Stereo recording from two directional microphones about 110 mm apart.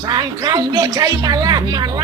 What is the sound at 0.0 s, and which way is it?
Speech, 40° right (ahead or behind).